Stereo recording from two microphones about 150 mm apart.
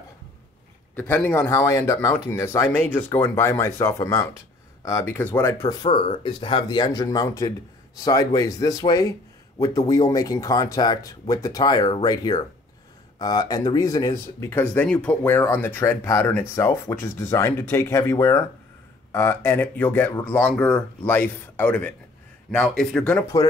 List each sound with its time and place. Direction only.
0.9 s speech: 10° left (ahead or behind)
6.2 s a man's voice: 35° left (ahead or behind); by 23.2 s 5° left (ahead or behind)